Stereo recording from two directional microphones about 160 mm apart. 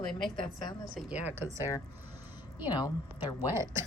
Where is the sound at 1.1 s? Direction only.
10° right (ahead or behind).